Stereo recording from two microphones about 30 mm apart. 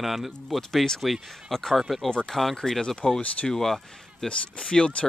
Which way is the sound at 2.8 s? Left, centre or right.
Left.